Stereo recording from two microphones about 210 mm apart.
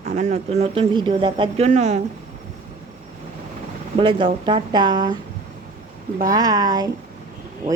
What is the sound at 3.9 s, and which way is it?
Speech, 25° right (ahead or behind).